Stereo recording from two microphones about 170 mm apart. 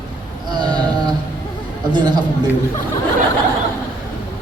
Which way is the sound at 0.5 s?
25° right (ahead or behind).